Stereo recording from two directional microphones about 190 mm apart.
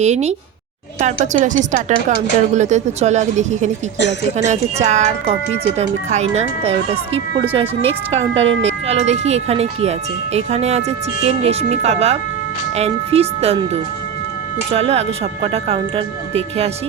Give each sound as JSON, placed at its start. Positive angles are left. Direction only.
{"t": 0.0, "sound": "speech", "side_deg": -35}